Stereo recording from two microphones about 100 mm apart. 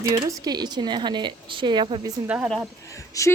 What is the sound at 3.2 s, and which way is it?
Speech, 35° left (ahead or behind).